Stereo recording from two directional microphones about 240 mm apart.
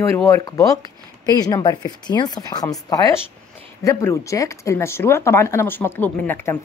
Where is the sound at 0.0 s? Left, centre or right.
Centre.